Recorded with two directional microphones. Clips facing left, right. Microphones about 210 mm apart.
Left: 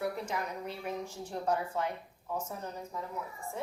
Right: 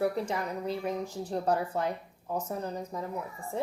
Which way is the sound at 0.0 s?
35° right (ahead or behind).